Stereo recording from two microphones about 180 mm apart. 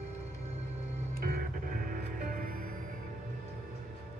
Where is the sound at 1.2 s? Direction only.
50° right (ahead or behind).